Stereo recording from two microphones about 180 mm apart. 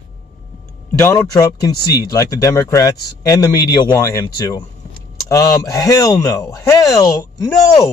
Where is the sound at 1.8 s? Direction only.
60° left (ahead or behind).